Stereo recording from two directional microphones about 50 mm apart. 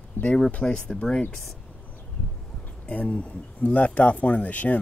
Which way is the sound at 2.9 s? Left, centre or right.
Left.